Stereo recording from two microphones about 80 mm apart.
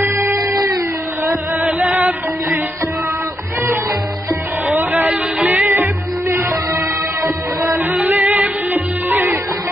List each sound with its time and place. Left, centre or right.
0.0 s music: right
0.4 s a sound: right
1.6 s chant: centre
4.6 s music: right
6.3 s music: right
7.9 s music: centre